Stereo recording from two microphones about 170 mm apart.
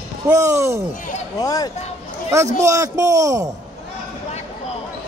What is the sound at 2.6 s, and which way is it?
Speech, 20° right (ahead or behind).